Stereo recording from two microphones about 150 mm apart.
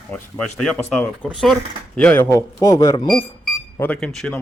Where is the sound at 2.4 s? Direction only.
20° left (ahead or behind).